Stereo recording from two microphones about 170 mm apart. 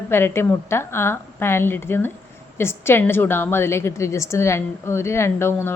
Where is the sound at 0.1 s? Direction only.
15° left (ahead or behind).